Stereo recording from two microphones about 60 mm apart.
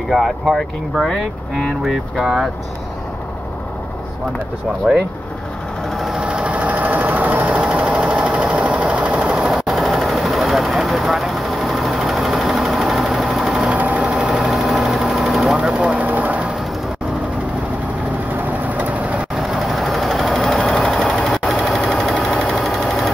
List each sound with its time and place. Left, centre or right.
0.1 s speech: centre
1.0 s speech: centre
2.2 s speech: centre
4.9 s speech: centre
5.9 s sewing machine: centre
6.2 s sewing machine: centre
9.4 s vehicle: centre
13.7 s sewing machine: right
14.1 s engine: centre
16.0 s sewing machine: right
18.7 s vehicle: right
19.3 s vehicle: centre
20.6 s sewing machine: centre
21.0 s a sound: centre